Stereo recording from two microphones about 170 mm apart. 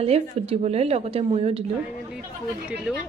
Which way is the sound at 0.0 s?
35° right (ahead or behind).